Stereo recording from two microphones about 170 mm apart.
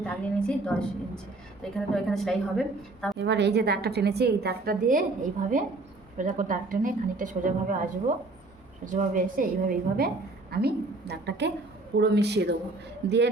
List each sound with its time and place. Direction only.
0.0 s a woman's voice: 5° left (ahead or behind)
3.2 s a woman's voice: 90° right; by 10.1 s 55° right (ahead or behind)
10.5 s a woman's voice: 70° right (ahead or behind)